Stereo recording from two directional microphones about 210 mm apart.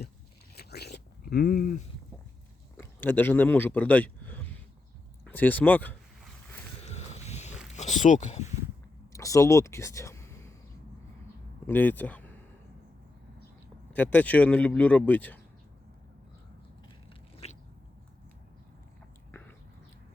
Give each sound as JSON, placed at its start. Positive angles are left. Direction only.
{"t": 0.5, "sound": "a sound", "side_deg": 50}
{"t": 2.7, "sound": "speech", "side_deg": 10}
{"t": 6.8, "sound": "a sound", "side_deg": 30}
{"t": 7.8, "sound": "speech", "side_deg": 35}
{"t": 9.1, "sound": "speech", "side_deg": 15}
{"t": 11.6, "sound": "speech", "side_deg": 10}
{"t": 13.9, "sound": "speech", "side_deg": 5}
{"t": 17.4, "sound": "biting", "side_deg": 30}
{"t": 19.3, "sound": "a sound", "side_deg": 10}